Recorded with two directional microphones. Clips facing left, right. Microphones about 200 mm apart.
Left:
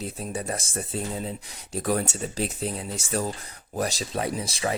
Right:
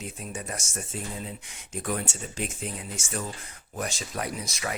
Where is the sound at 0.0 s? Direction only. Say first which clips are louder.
Left 5 dB; 35° left (ahead or behind).